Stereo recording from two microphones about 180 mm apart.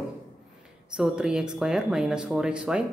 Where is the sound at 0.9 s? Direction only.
5° right (ahead or behind).